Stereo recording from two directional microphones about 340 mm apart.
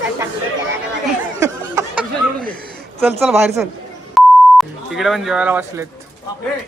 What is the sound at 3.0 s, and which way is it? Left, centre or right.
Speech, centre.